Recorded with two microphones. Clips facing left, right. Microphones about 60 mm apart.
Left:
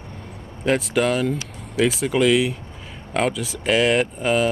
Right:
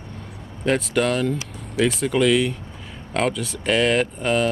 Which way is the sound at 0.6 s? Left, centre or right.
Centre.